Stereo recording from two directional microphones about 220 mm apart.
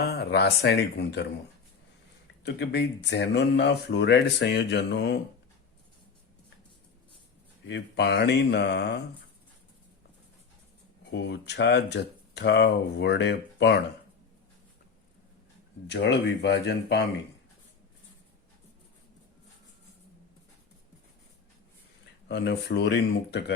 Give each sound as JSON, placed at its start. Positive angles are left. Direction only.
{"t": 0.0, "sound": "speech", "side_deg": 45}
{"t": 2.4, "sound": "speech", "side_deg": 50}
{"t": 7.7, "sound": "speech", "side_deg": 50}
{"t": 11.1, "sound": "speech", "side_deg": 50}
{"t": 15.9, "sound": "speech", "side_deg": 50}
{"t": 22.3, "sound": "speech", "side_deg": 50}